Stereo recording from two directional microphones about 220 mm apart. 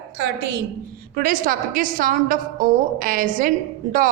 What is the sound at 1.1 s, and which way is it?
A woman's voice, 40° right (ahead or behind).